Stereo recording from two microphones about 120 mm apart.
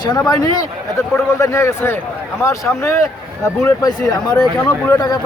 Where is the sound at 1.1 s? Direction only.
25° left (ahead or behind).